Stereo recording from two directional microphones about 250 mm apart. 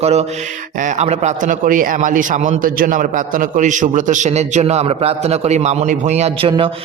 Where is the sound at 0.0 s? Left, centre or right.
Right.